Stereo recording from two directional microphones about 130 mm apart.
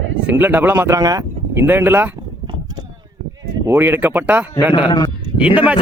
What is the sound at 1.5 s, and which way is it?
Speech, 15° right (ahead or behind).